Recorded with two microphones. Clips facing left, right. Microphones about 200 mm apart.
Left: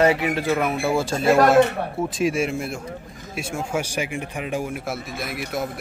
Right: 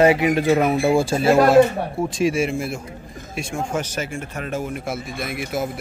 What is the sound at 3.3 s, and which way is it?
Speech, 10° left (ahead or behind).